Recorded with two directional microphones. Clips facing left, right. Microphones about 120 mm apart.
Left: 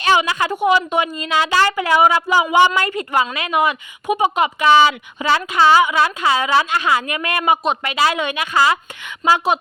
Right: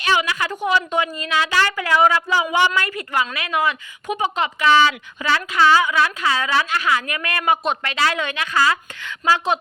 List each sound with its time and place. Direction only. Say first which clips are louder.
0.2 s speech: left 4 dB; 25° left (ahead or behind)
0.5 s a woman's voice: left 4 dB; 15° left (ahead or behind)
7.6 s speech: left 3 dB; centre (ahead or behind)
7.9 s a woman's voice: left 4 dB; 15° left (ahead or behind)